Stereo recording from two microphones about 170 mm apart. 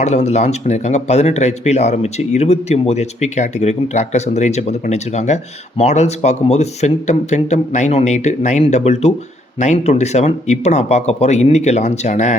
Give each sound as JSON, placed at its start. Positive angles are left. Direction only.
{"t": 0.0, "sound": "speech", "side_deg": 40}